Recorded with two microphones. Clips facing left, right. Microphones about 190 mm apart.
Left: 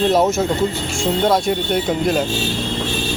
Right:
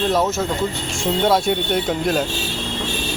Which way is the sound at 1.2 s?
Centre (ahead or behind).